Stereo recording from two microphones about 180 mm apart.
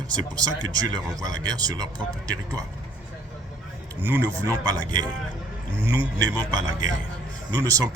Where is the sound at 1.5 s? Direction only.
20° right (ahead or behind).